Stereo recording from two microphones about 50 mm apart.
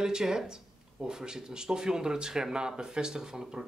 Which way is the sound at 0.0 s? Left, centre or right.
Centre.